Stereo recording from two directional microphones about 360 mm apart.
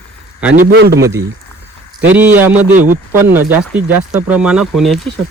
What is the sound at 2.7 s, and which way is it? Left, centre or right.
Speech, right.